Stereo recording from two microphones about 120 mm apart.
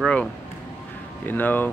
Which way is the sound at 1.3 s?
15° left (ahead or behind).